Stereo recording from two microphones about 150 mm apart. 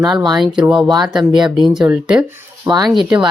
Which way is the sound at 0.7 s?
5° right (ahead or behind).